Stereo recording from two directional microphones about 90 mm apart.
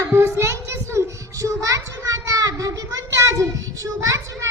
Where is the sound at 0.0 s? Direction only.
25° right (ahead or behind).